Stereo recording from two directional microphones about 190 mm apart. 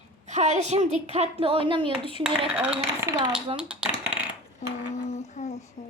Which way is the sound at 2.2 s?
5° right (ahead or behind).